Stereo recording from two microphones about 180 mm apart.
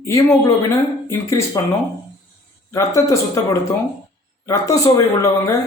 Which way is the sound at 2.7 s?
15° left (ahead or behind).